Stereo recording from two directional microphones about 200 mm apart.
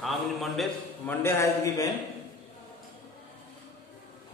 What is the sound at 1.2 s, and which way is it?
Speech, 10° left (ahead or behind).